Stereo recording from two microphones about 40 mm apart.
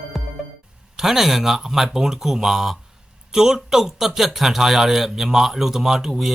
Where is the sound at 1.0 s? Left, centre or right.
Centre.